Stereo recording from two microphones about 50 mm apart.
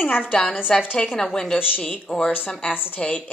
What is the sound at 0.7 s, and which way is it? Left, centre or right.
A woman's voice, centre.